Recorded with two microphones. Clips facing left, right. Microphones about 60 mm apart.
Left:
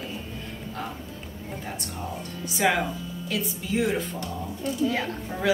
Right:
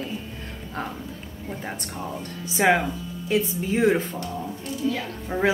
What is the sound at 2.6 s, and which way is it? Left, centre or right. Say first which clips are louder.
A woman's voice: right 4 dB; right.